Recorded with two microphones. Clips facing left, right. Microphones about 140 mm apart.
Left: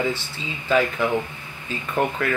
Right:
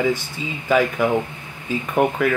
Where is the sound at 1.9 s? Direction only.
15° right (ahead or behind).